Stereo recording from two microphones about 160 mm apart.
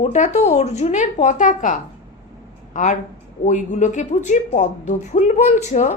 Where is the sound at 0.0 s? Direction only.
45° left (ahead or behind).